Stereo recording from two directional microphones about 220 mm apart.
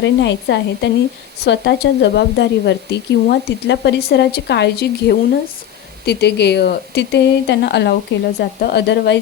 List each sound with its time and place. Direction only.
0.0 s speech: 55° left (ahead or behind)